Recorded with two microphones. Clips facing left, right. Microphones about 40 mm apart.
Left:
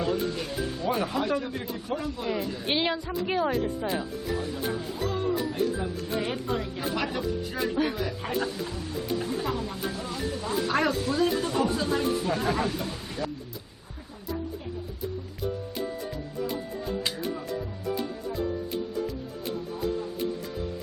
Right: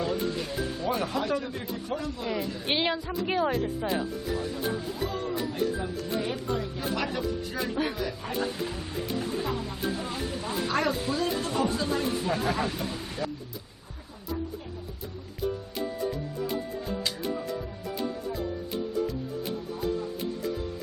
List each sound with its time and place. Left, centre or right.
0.0 s speech: centre
6.1 s speech: left
6.8 s speech: centre
8.5 s speech: centre
9.2 s speech: centre
9.9 s speech: centre
10.7 s speech: centre
10.9 s speech: centre
15.7 s music: centre